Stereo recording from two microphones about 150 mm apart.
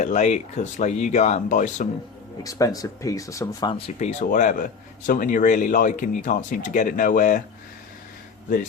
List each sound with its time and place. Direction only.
0.0 s speech: 50° left (ahead or behind)
2.4 s speech: 25° left (ahead or behind)
3.8 s speech: 45° left (ahead or behind); by 7.4 s 60° left (ahead or behind)